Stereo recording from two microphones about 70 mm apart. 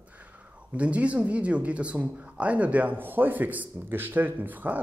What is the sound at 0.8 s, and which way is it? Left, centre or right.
Speech, centre.